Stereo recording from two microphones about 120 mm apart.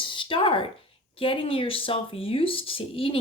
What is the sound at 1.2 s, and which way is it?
Speech, 50° left (ahead or behind).